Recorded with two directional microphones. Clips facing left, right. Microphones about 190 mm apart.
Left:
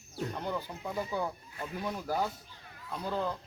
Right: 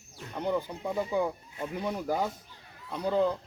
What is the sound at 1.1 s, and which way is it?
Speech, 15° right (ahead or behind).